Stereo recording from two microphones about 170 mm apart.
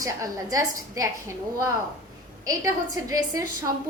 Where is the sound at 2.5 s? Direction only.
20° right (ahead or behind).